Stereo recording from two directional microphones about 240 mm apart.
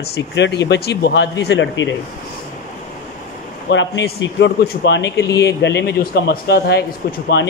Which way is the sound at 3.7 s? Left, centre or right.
Left.